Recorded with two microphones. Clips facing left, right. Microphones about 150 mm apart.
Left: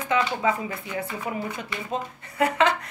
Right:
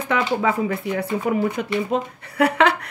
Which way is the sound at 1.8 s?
70° right (ahead or behind).